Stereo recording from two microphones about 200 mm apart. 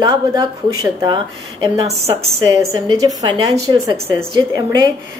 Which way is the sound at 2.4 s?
15° right (ahead or behind).